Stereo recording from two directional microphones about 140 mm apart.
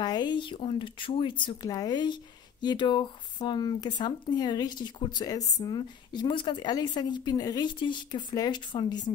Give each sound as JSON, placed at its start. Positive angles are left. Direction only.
{"t": 0.0, "sound": "a woman's voice", "side_deg": 30}